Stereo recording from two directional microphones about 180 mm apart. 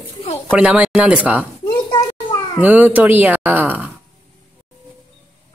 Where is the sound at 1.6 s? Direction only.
20° left (ahead or behind).